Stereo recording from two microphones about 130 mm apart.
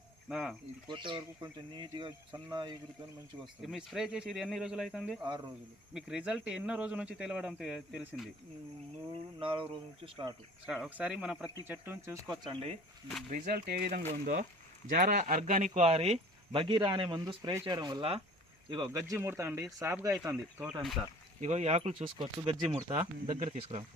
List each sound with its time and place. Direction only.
0.3 s speech: 5° right (ahead or behind)
0.9 s speech: 40° right (ahead or behind)
3.4 s speech: centre (ahead or behind)
9.4 s speech: 45° right (ahead or behind)
10.8 s speech: 10° right (ahead or behind)
12.3 s speech: 35° right (ahead or behind)
13.3 s speech: 90° right; by 16.2 s 55° right (ahead or behind)
16.5 s speech: 45° right (ahead or behind)
17.2 s speech: 25° right (ahead or behind)
17.7 s speech: 35° right (ahead or behind)
20.2 s speech: 10° right (ahead or behind)
21.4 s speech: 55° right (ahead or behind); by 22.9 s 35° right (ahead or behind)
22.9 s speech: 55° right (ahead or behind)